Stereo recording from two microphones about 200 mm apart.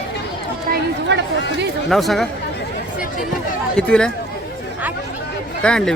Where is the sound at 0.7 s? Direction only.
60° right (ahead or behind).